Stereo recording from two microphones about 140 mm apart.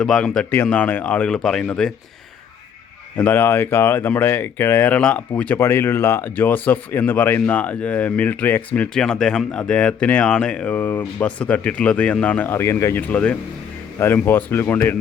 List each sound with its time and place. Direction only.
0.0 s speech: 5° left (ahead or behind)
3.2 s speech: 10° left (ahead or behind)